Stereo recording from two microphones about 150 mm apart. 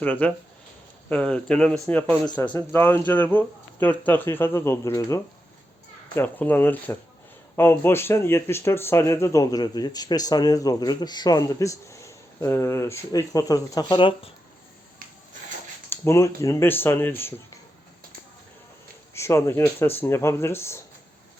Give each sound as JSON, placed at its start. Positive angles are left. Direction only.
{"t": 0.0, "sound": "speech", "side_deg": 10}
{"t": 15.9, "sound": "speech", "side_deg": 20}
{"t": 19.1, "sound": "speech", "side_deg": 20}